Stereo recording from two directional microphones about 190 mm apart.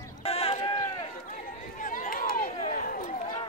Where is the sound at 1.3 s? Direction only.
45° left (ahead or behind).